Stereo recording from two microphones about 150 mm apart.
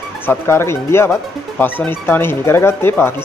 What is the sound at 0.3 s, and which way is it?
Speech, 15° left (ahead or behind).